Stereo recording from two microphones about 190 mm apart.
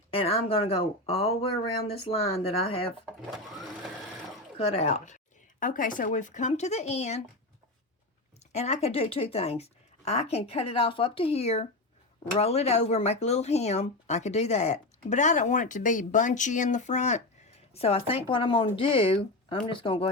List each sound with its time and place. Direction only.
0.1 s speech: 30° left (ahead or behind)
3.2 s speech: centre (ahead or behind)
4.5 s speech: 30° left (ahead or behind)
8.5 s speech: 35° left (ahead or behind)